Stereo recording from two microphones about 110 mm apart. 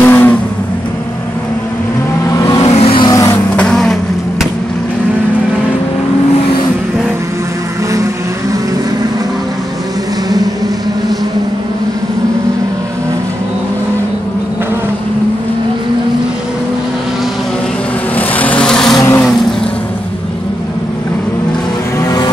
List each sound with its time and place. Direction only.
0.0 s vehicle: 20° left (ahead or behind)
2.3 s vehicle: 30° left (ahead or behind)
2.7 s vehicle: 70° left (ahead or behind)
3.1 s vehicle: 30° left (ahead or behind)
3.5 s vehicle: 10° left (ahead or behind)
18.1 s vehicle: 15° left (ahead or behind)
18.9 s vehicle: 20° left (ahead or behind)
22.0 s vehicle: 35° left (ahead or behind)